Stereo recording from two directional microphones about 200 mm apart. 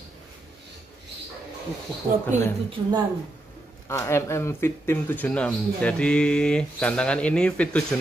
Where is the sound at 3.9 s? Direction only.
15° left (ahead or behind).